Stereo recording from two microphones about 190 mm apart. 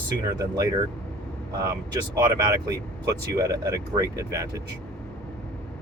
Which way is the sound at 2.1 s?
20° right (ahead or behind).